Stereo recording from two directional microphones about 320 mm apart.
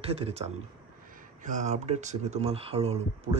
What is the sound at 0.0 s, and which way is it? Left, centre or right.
A man's voice, centre.